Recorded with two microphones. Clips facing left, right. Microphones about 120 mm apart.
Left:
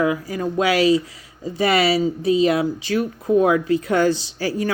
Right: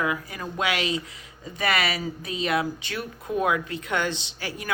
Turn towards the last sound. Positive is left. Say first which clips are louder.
# left 12 dB
turn(degrees=35)  # may be behind; listen again after turning